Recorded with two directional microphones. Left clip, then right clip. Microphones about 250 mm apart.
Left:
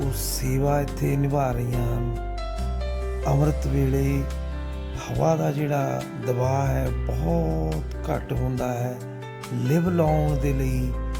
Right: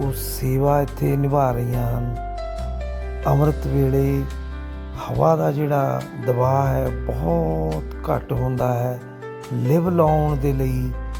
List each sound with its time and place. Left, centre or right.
0.1 s speech: centre
3.2 s speech: centre